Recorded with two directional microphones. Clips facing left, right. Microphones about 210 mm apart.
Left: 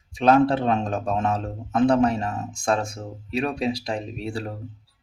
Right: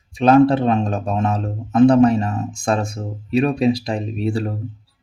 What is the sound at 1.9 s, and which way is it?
Speech, 20° right (ahead or behind).